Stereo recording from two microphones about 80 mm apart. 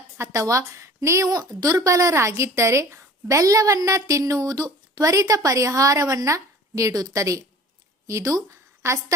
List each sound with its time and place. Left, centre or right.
0.2 s a woman's voice: right